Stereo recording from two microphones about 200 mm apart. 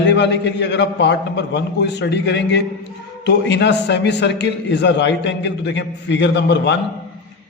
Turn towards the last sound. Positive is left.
turn(degrees=60)  # may be behind; listen again after turning